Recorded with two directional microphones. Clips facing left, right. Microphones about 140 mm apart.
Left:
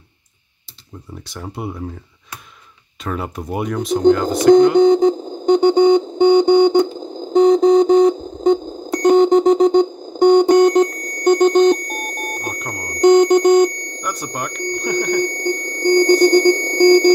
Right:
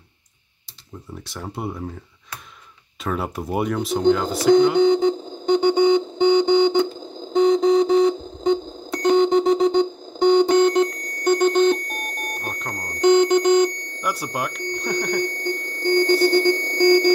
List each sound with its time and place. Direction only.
1.2 s speech: centre (ahead or behind)
3.0 s speech: centre (ahead or behind)
4.7 s a sound: 40° left (ahead or behind)
14.0 s speech: 5° right (ahead or behind)
15.2 s alarm clock: 45° left (ahead or behind)